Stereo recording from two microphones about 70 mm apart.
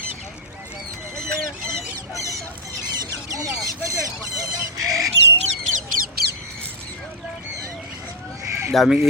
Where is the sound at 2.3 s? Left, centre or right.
Right.